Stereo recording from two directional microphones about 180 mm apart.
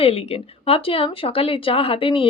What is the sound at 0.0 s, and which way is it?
Speech, 35° left (ahead or behind).